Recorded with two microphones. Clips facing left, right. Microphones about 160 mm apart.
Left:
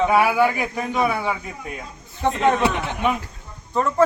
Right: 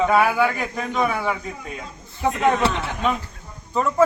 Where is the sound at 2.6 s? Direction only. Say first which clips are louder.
Left 1 dB; 15° left (ahead or behind).